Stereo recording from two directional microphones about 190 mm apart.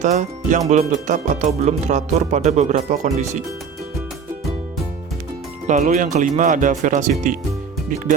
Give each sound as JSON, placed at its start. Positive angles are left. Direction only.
{"t": 0.0, "sound": "speech", "side_deg": -40}
{"t": 5.6, "sound": "speech", "side_deg": -40}